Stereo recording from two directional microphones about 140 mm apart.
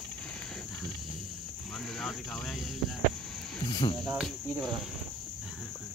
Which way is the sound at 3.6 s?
35° left (ahead or behind).